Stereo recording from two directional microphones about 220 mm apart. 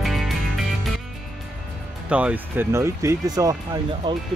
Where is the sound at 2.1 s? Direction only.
5° right (ahead or behind); by 4.2 s 25° right (ahead or behind).